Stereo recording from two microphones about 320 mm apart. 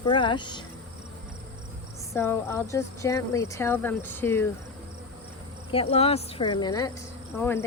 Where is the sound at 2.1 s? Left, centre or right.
Centre.